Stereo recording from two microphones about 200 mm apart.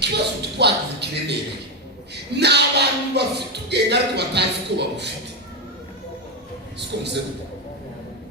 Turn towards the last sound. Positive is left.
turn(degrees=-60)  # may be behind; listen again after turning